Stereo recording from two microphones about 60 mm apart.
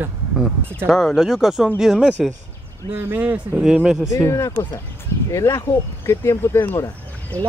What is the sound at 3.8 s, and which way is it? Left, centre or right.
Speech, centre.